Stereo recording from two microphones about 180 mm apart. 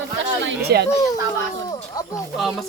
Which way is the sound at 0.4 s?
65° right (ahead or behind).